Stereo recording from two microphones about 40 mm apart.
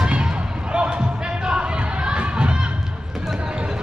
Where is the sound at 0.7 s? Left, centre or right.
Right.